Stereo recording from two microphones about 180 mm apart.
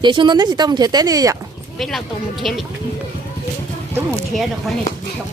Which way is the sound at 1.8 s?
Centre (ahead or behind).